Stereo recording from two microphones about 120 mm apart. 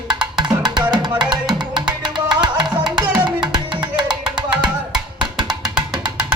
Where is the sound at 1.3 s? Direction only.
40° right (ahead or behind).